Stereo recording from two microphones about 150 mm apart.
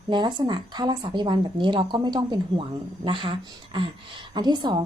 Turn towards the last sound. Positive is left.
turn(degrees=-30)  # may be behind; listen again after turning